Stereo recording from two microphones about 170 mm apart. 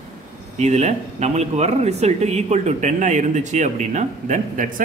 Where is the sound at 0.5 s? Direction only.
40° right (ahead or behind).